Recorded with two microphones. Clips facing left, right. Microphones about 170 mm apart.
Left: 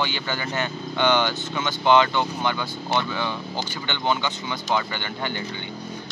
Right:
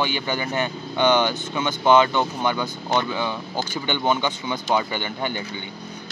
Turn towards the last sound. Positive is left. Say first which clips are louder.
# right 3 dB
turn(degrees=-15)  # may be behind; listen again after turning